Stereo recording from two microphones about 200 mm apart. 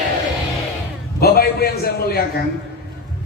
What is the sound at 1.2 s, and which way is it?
Speech, 50° left (ahead or behind).